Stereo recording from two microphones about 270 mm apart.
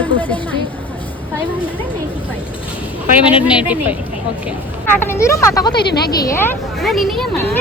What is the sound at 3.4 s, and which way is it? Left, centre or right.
Speech, centre.